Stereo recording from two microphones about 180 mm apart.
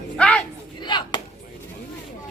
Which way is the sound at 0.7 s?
25° left (ahead or behind).